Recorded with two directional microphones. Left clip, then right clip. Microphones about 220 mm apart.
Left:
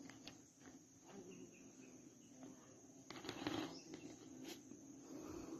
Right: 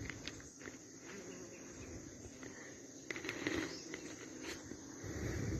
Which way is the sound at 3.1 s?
20° left (ahead or behind).